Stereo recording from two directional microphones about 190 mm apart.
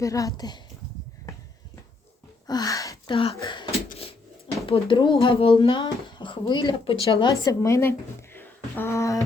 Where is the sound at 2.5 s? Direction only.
20° left (ahead or behind).